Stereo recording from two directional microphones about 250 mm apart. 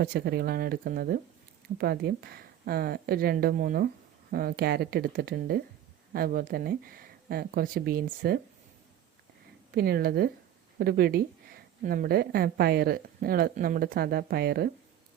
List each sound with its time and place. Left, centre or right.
0.0 s speech: right
9.7 s speech: right